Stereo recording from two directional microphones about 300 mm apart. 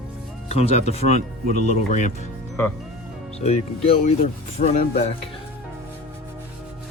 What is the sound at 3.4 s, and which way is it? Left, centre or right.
Speech, centre.